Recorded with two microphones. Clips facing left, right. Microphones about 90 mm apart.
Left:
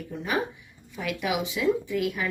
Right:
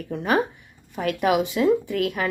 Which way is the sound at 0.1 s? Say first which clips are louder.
Right 7 dB; 60° right (ahead or behind).